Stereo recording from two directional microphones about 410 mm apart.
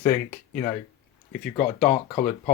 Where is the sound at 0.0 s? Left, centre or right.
Centre.